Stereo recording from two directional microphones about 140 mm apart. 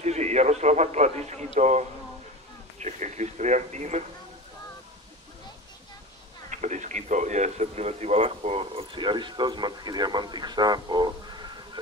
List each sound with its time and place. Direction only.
0.0 s a man's voice: 55° right (ahead or behind)
6.5 s speech: 60° right (ahead or behind); by 11.8 s 30° right (ahead or behind)